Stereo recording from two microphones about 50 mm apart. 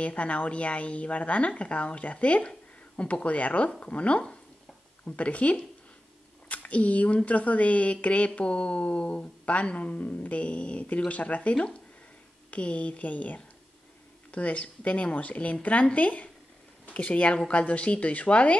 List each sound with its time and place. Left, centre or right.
0.0 s speech: left